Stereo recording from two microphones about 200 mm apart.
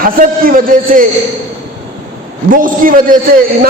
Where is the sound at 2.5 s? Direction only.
45° right (ahead or behind).